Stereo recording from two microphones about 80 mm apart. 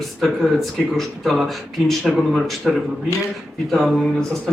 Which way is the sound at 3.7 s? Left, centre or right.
Centre.